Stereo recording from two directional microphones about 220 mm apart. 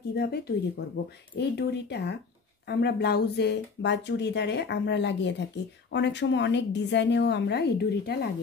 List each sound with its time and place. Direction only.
0.1 s speech: 45° left (ahead or behind)